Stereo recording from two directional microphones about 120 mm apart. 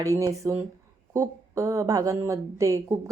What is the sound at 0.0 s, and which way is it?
A woman's voice, 30° right (ahead or behind).